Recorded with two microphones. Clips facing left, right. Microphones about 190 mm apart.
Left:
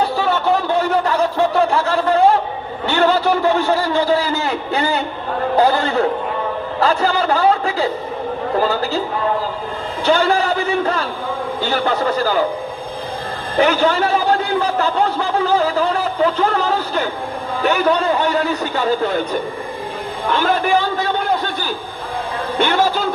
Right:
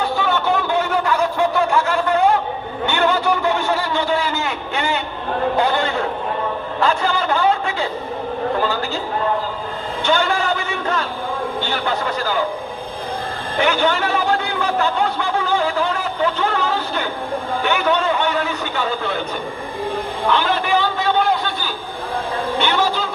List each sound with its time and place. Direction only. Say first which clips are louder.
0.0 s a sound: left 2 dB; 35° left (ahead or behind)
2.8 s a man's voice: left 3 dB; 35° left (ahead or behind)
10.0 s a sound: left 4 dB; 35° left (ahead or behind)
11.6 s a man's voice: left 8 dB; 40° left (ahead or behind)
13.6 s a man's voice: left 3 dB; 35° left (ahead or behind)
20.3 s a man's voice: left 3 dB; 45° left (ahead or behind)
22.6 s a man's voice: left 5 dB; 45° left (ahead or behind)